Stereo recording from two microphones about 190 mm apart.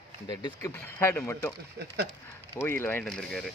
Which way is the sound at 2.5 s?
10° left (ahead or behind).